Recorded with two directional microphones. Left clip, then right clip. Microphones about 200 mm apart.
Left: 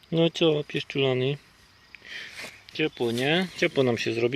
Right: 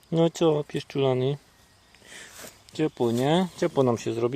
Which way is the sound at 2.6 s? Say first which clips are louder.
Right 1 dB; 25° right (ahead or behind).